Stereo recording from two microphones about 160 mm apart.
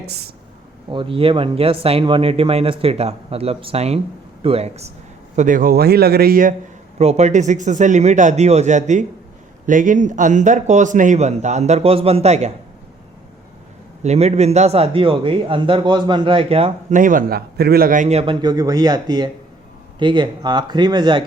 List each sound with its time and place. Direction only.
0.9 s speech: 30° right (ahead or behind)
5.4 s speech: 55° right (ahead or behind)
7.0 s speech: 45° right (ahead or behind)
14.0 s speech: 45° right (ahead or behind)
17.0 s a man's voice: 60° right (ahead or behind)
18.2 s speech: 30° right (ahead or behind)